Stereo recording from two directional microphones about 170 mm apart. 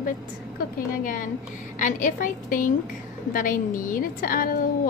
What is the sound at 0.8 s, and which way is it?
A woman's voice, 50° left (ahead or behind).